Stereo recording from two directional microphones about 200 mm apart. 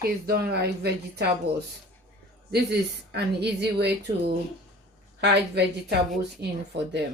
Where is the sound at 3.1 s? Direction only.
55° right (ahead or behind).